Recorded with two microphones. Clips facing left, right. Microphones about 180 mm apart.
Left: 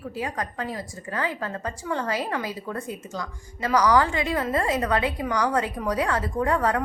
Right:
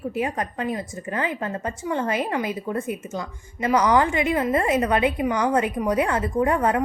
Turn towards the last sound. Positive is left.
turn(degrees=-20)  # may be behind; listen again after turning